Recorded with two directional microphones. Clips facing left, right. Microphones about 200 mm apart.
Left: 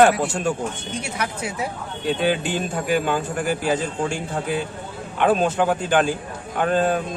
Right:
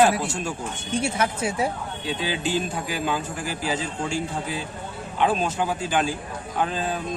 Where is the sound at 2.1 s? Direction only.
55° left (ahead or behind).